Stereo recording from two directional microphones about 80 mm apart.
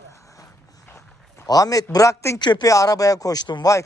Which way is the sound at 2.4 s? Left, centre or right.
Left.